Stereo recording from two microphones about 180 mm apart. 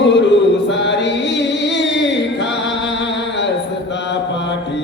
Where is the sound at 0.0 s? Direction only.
75° left (ahead or behind).